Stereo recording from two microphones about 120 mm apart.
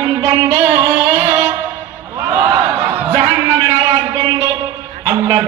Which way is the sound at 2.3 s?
25° right (ahead or behind).